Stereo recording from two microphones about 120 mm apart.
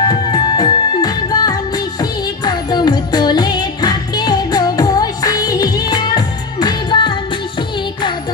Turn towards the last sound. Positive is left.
turn(degrees=40)  # may be behind; listen again after turning